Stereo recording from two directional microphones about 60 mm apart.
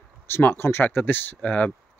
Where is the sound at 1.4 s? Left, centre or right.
Left.